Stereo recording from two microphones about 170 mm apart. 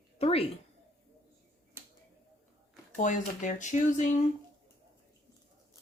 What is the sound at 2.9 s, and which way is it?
Speech, 50° left (ahead or behind).